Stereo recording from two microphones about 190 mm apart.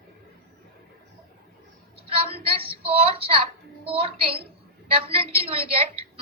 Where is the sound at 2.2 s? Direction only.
30° right (ahead or behind).